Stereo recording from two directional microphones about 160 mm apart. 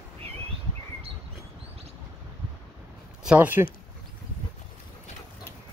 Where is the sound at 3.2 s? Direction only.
10° right (ahead or behind).